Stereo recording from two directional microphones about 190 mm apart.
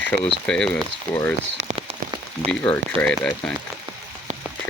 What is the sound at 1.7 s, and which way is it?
Rain on surface, 30° right (ahead or behind).